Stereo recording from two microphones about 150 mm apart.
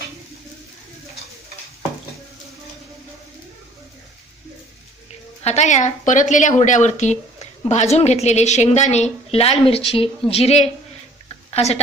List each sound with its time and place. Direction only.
5.4 s speech: 50° left (ahead or behind)